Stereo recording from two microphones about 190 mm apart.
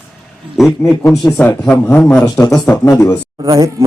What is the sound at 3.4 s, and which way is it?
Speech, 15° right (ahead or behind).